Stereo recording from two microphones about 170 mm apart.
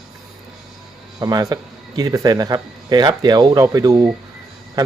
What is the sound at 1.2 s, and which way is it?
A man's voice, 20° right (ahead or behind).